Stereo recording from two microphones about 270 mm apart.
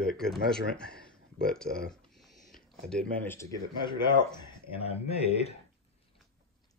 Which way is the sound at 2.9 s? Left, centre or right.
Centre.